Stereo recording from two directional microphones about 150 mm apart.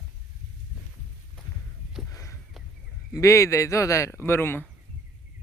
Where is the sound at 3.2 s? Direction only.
20° left (ahead or behind).